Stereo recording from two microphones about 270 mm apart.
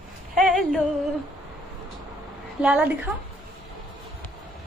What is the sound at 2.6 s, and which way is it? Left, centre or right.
Speech, centre.